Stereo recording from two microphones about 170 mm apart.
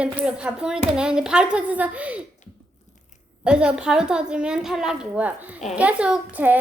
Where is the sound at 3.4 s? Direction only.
5° right (ahead or behind).